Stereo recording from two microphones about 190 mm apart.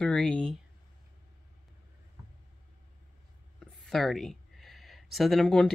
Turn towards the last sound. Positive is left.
turn(degrees=5)  # may be behind; listen again after turning